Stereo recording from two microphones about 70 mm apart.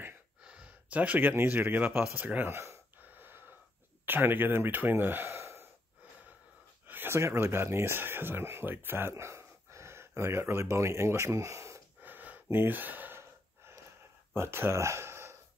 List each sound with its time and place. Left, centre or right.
0.4 s speech: centre
2.5 s speech: right
3.0 s wheeze: right
4.0 s speech: right
5.3 s gasp: right
6.9 s a sound: right
7.2 s speech: right
12.0 s gasp: right
14.3 s speech: right